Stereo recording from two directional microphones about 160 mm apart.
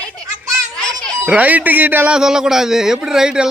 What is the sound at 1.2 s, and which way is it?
A man's voice, 10° right (ahead or behind).